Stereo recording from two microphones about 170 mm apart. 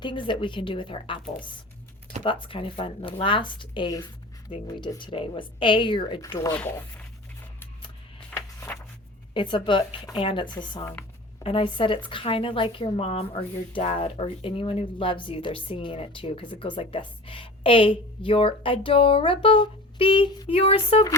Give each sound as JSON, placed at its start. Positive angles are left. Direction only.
{"t": 0.0, "sound": "speech", "side_deg": 30}
{"t": 6.6, "sound": "speech", "side_deg": 10}
{"t": 8.3, "sound": "a sound", "side_deg": 15}
{"t": 9.3, "sound": "a woman's voice", "side_deg": 30}